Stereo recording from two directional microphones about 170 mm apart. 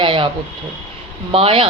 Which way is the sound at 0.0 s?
30° right (ahead or behind).